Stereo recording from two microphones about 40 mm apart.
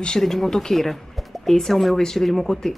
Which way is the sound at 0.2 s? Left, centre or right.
Centre.